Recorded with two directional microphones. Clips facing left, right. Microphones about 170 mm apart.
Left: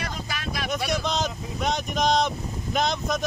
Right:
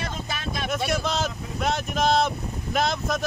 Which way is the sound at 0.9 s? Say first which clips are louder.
Even; 5° right (ahead or behind).